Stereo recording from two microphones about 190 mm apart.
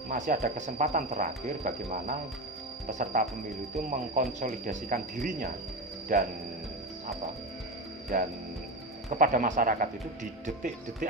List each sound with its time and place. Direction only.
0.1 s speech: 45° right (ahead or behind)
8.1 s speech: 45° right (ahead or behind)